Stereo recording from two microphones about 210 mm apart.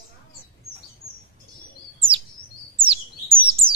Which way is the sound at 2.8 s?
25° right (ahead or behind).